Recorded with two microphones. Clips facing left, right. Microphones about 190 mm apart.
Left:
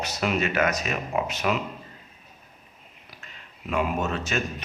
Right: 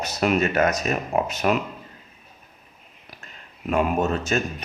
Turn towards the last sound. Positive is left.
turn(degrees=-40)  # may be behind; listen again after turning